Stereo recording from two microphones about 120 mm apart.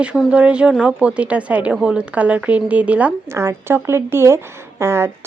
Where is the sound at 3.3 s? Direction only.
20° right (ahead or behind).